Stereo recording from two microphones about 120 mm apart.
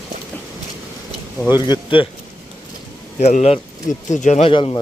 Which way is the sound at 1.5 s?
35° left (ahead or behind).